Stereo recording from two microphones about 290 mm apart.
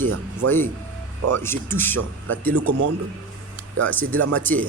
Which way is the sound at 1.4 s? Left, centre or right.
Centre.